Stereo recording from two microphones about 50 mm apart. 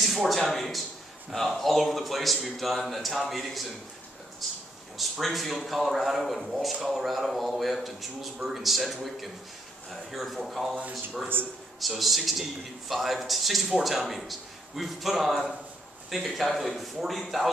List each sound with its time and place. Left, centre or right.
0.0 s a man's voice: centre
4.9 s a man's voice: centre
11.4 s a man's voice: right
12.0 s a man's voice: centre